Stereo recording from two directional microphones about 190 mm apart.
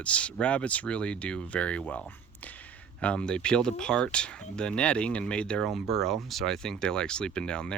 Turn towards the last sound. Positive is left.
turn(degrees=5)  # may be behind; listen again after turning